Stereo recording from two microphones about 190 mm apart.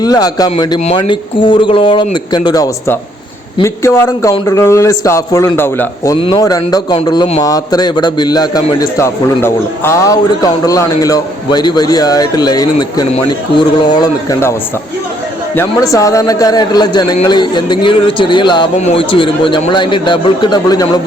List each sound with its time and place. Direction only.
0.0 s a man's voice: 20° left (ahead or behind)
6.1 s a man's voice: 25° left (ahead or behind)
15.5 s a man's voice: 15° left (ahead or behind)